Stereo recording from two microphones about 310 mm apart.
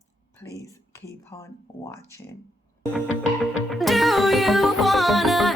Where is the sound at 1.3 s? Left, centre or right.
Centre.